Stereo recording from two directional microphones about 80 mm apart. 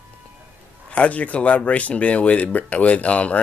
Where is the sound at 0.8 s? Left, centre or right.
Centre.